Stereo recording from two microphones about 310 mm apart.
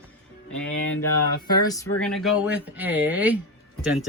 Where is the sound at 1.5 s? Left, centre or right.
Centre.